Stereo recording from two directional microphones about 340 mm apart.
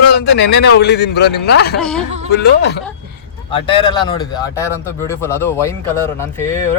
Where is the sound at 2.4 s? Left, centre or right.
Left.